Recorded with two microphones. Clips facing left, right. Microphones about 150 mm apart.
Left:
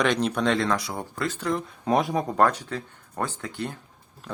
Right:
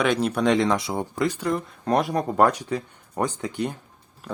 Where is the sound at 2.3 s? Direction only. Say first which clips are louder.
Right 3 dB; 15° right (ahead or behind).